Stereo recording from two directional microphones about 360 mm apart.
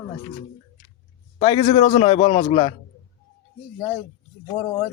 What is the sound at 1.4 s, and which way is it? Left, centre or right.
A man's voice, centre.